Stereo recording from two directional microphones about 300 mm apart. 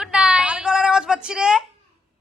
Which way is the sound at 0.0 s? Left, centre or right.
Centre.